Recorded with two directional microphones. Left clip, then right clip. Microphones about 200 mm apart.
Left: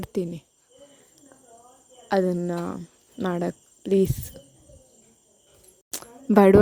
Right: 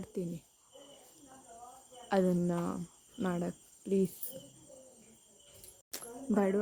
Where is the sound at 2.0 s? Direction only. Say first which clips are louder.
Left 8 dB; 30° left (ahead or behind).